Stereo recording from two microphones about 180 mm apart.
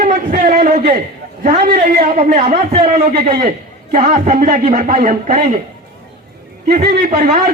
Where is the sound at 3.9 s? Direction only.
45° right (ahead or behind).